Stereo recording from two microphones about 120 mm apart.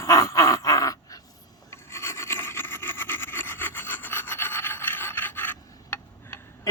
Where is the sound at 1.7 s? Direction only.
20° left (ahead or behind).